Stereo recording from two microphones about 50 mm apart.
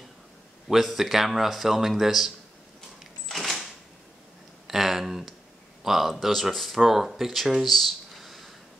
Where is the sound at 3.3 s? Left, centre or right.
Centre.